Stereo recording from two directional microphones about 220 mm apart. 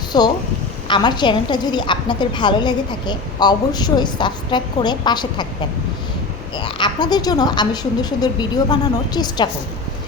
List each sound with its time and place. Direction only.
0.1 s a woman's voice: 20° left (ahead or behind)
6.7 s a woman's voice: 20° left (ahead or behind)